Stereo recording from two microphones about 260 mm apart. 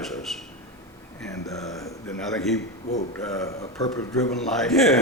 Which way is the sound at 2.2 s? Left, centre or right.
Centre.